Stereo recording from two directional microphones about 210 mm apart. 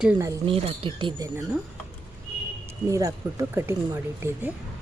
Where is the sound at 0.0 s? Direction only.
10° right (ahead or behind).